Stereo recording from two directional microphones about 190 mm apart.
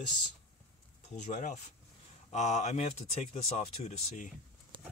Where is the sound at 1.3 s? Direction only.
40° left (ahead or behind).